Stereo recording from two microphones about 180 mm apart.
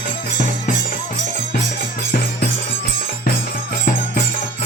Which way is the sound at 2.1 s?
50° left (ahead or behind).